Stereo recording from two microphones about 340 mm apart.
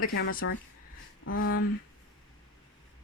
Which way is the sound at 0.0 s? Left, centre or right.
Left.